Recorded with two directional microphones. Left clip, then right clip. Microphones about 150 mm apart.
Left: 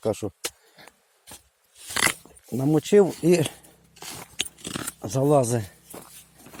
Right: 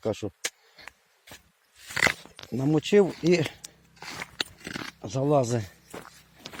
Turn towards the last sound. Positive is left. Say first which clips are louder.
# left 3 dB
turn(degrees=15)  # may be behind; listen again after turning